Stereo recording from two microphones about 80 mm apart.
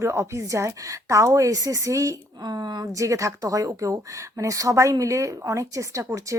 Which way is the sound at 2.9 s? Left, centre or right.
Right.